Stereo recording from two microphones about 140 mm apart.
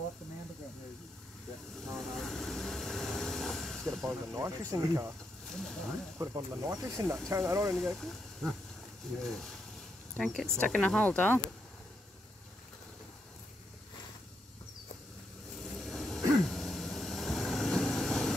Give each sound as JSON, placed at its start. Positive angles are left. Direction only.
{"t": 1.9, "sound": "vehicle", "side_deg": 5}
{"t": 4.0, "sound": "speech", "side_deg": -20}
{"t": 5.5, "sound": "speech", "side_deg": 5}
{"t": 6.1, "sound": "speech", "side_deg": -25}
{"t": 7.7, "sound": "speech", "side_deg": 0}
{"t": 15.5, "sound": "a sound", "side_deg": 0}